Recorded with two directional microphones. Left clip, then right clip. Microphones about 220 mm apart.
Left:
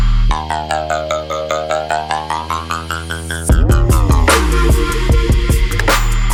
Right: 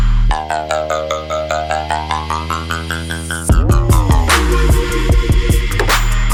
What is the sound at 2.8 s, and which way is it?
Music, 15° right (ahead or behind).